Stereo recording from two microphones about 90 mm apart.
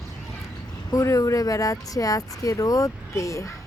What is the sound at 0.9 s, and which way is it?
Speech, 40° left (ahead or behind).